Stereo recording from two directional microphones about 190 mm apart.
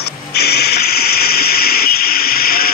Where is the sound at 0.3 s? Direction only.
55° left (ahead or behind).